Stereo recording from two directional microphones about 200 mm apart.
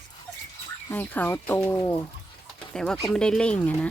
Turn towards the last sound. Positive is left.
turn(degrees=5)  # may be behind; listen again after turning